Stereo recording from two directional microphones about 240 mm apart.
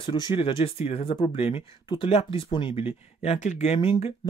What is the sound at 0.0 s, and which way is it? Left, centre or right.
Speech, centre.